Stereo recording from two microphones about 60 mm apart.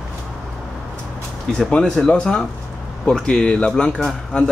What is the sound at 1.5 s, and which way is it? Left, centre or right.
Speech, centre.